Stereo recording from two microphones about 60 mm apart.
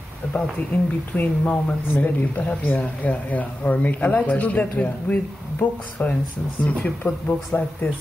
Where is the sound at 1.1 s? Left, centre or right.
Left.